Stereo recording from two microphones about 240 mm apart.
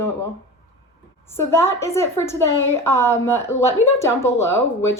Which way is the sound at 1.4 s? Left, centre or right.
Centre.